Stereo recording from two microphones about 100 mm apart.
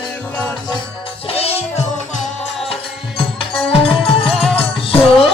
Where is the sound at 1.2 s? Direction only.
80° left.